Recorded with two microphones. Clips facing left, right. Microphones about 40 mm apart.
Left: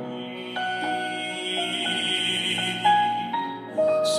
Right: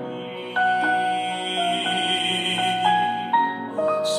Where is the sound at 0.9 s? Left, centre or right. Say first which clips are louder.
Right 6 dB; right.